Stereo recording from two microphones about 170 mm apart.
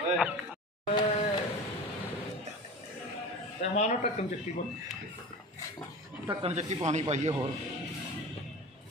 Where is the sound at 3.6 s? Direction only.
45° left (ahead or behind).